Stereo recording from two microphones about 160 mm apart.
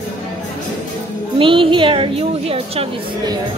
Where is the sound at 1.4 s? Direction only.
30° right (ahead or behind).